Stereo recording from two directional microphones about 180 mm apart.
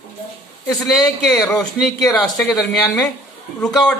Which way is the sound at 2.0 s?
20° left (ahead or behind).